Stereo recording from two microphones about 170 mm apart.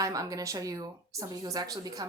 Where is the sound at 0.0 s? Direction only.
20° right (ahead or behind).